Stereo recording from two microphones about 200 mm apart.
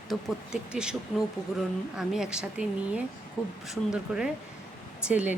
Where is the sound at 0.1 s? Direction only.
Centre (ahead or behind).